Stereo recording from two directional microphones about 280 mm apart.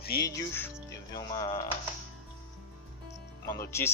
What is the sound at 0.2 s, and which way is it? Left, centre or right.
Speech, centre.